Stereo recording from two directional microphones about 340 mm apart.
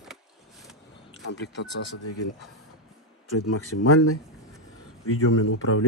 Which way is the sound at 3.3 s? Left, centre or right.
Left.